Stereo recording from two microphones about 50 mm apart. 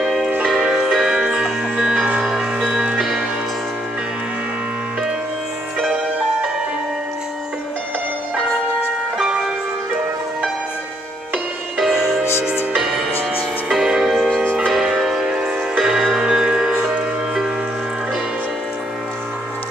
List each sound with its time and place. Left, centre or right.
0.0 s music: centre
9.2 s music: centre
11.8 s music: centre
14.3 s church bell: centre
15.0 s music: centre